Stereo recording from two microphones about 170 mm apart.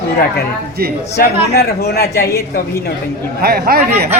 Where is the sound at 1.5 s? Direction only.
70° left (ahead or behind).